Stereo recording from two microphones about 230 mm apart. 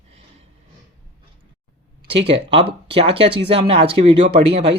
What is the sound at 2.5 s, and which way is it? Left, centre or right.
Speech, right.